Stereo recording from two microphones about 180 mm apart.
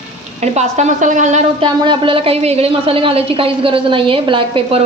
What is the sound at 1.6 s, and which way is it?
A woman's voice, 30° right (ahead or behind).